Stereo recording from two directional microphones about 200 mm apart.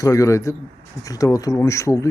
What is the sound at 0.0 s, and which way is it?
A man's voice, 15° left (ahead or behind).